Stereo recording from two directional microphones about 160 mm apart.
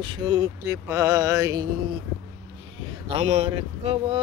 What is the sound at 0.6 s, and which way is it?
Speech, 15° right (ahead or behind).